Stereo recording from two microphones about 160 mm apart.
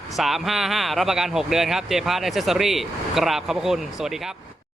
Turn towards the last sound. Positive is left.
turn(degrees=-5)  # may be behind; listen again after turning